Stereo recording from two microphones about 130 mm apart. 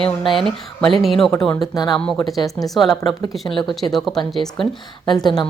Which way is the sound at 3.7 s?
Centre (ahead or behind).